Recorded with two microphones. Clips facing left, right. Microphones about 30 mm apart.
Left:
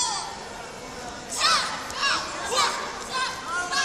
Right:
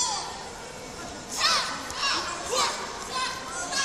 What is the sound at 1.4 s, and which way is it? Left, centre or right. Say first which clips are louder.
Crowd: left 3 dB; centre.